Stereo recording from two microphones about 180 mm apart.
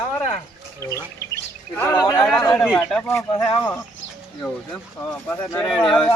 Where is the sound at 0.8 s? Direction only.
15° left (ahead or behind).